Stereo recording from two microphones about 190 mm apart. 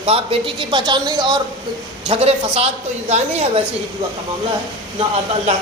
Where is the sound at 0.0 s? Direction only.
30° right (ahead or behind).